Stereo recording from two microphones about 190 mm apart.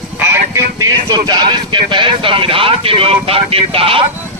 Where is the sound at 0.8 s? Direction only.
20° right (ahead or behind).